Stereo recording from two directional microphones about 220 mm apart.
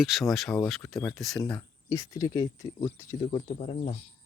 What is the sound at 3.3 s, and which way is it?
Speech, 25° left (ahead or behind).